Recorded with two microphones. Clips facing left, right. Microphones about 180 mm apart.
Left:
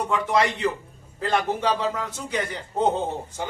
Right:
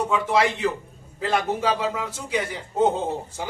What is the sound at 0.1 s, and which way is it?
A man's voice, 5° right (ahead or behind).